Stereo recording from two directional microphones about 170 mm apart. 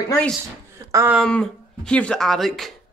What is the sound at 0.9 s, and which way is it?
Speech, 10° right (ahead or behind).